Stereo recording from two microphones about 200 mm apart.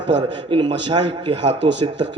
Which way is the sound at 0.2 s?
25° right (ahead or behind).